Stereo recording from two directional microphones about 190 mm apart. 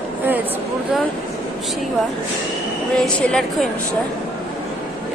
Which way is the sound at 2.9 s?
5° left (ahead or behind).